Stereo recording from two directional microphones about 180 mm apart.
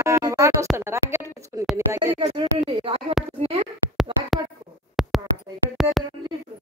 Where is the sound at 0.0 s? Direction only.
15° right (ahead or behind).